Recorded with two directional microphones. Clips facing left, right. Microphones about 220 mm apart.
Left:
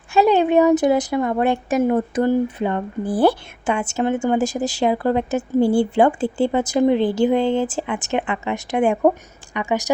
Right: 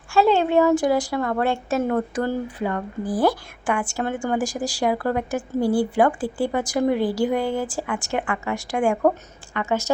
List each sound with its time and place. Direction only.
0.1 s speech: 20° left (ahead or behind)